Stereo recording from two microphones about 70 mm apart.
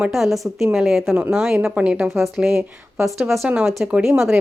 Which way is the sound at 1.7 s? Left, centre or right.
Centre.